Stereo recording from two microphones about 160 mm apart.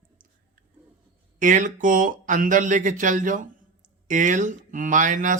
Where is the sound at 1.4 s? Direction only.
55° right (ahead or behind).